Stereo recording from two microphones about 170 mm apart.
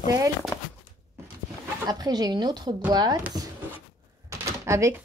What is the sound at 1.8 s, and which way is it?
Speech, 20° right (ahead or behind).